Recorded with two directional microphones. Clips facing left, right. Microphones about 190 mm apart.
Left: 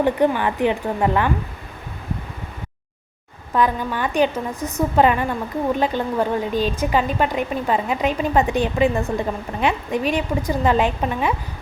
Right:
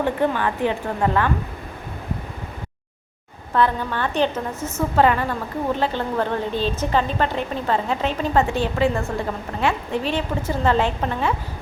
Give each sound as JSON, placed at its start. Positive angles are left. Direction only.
{"t": 0.0, "sound": "a woman's voice", "side_deg": 15}
{"t": 3.5, "sound": "a woman's voice", "side_deg": 10}